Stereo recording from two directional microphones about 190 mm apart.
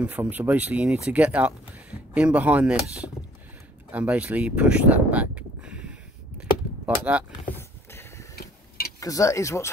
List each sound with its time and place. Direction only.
0.0 s speech: 10° right (ahead or behind)
7.1 s speech: 5° right (ahead or behind)
7.4 s a sound: 10° left (ahead or behind)
8.4 s tick-tock: 55° left (ahead or behind)
9.0 s speech: 15° left (ahead or behind)